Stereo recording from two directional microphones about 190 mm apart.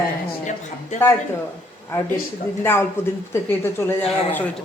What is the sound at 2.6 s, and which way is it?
Speech, 10° left (ahead or behind).